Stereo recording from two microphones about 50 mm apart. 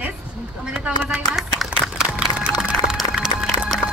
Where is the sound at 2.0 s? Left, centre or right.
Centre.